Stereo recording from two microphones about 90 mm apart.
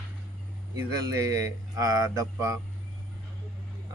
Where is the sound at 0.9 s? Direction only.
45° right (ahead or behind).